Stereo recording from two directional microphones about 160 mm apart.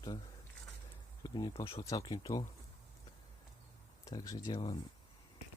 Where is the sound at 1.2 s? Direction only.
25° left (ahead or behind).